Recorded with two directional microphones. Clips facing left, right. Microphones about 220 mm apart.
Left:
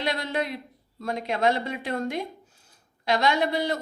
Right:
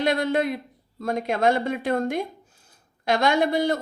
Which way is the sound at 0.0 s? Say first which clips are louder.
Right 6 dB; 50° right (ahead or behind).